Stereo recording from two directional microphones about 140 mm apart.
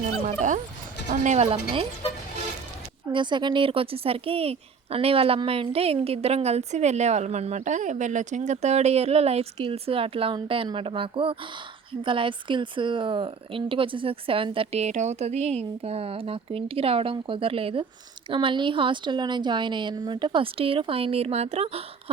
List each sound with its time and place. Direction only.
0.3 s dog: 65° right (ahead or behind)
1.1 s a woman's voice: 60° right (ahead or behind)
3.1 s a woman's voice: 35° right (ahead or behind)